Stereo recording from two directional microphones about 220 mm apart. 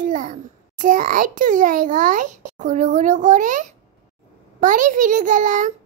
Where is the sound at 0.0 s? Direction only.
35° right (ahead or behind).